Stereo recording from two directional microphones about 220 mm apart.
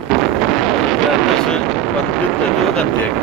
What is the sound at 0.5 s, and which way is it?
Wind noise, centre (ahead or behind).